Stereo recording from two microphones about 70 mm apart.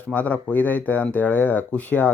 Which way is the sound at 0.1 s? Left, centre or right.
Left.